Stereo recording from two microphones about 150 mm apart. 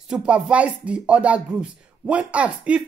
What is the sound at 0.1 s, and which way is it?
Speech, 5° right (ahead or behind).